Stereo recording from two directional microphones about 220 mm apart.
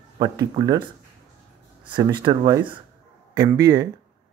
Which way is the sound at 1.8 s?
20° right (ahead or behind).